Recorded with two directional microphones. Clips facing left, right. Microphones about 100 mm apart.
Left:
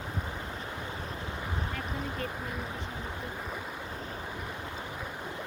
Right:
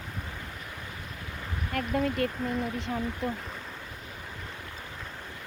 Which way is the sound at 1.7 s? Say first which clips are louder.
Right 8 dB; 65° right (ahead or behind).